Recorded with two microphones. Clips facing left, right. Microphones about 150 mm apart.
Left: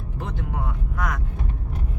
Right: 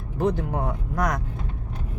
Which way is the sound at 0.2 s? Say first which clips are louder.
Right 8 dB; 40° right (ahead or behind).